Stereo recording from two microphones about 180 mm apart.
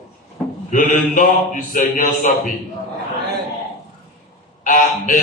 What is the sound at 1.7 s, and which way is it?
Mantra, 45° left (ahead or behind).